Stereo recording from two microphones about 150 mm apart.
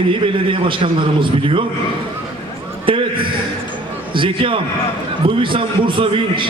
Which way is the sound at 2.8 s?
35° right (ahead or behind).